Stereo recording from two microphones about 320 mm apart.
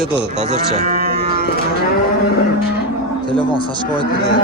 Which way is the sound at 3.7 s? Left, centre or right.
Centre.